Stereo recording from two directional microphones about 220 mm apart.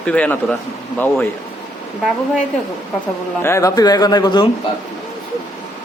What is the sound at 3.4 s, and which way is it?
A man's voice, 15° left (ahead or behind).